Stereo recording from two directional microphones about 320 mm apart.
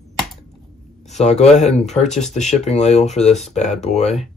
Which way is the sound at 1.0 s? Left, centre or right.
Left.